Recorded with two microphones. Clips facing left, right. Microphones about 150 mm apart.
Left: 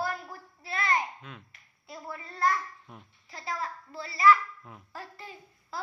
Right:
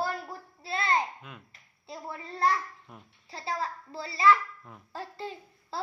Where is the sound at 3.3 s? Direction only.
30° right (ahead or behind).